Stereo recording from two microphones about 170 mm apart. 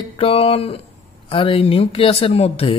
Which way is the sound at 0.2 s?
35° left (ahead or behind).